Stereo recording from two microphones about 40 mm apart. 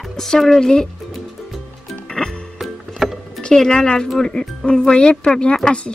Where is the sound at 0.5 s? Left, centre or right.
Centre.